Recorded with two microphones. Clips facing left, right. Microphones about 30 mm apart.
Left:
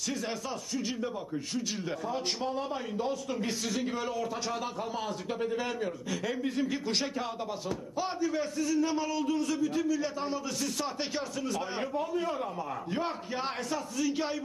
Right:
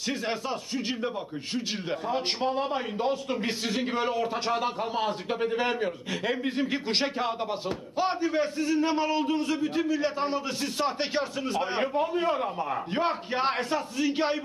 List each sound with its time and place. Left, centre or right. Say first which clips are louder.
0.3 s a man's voice: right 4 dB; right